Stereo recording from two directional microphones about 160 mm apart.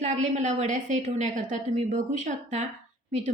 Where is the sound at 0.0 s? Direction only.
50° right (ahead or behind).